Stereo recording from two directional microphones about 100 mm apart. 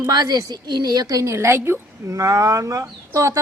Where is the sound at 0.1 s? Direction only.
40° right (ahead or behind).